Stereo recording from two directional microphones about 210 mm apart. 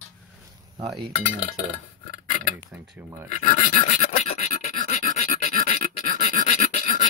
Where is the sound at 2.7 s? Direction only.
10° right (ahead or behind).